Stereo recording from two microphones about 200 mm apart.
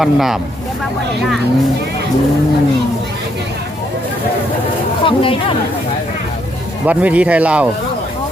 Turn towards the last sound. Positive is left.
turn(degrees=-5)  # may be behind; listen again after turning